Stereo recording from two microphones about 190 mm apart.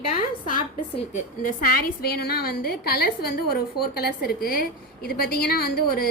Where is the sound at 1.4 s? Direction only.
50° left (ahead or behind).